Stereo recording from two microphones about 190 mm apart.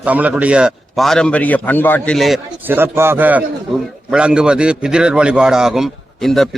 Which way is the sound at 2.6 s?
10° right (ahead or behind).